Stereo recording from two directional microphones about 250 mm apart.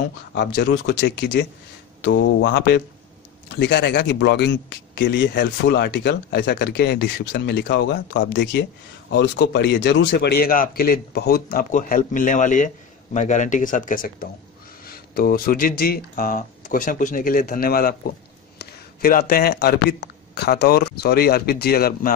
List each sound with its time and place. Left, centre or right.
0.3 s speech: left